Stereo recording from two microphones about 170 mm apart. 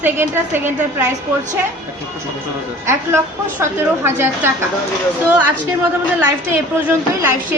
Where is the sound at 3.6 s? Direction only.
15° right (ahead or behind).